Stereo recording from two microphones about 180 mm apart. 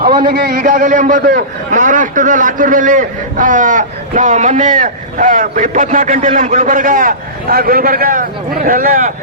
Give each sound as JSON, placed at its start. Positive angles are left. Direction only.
{"t": 0.2, "sound": "a man's voice", "side_deg": -55}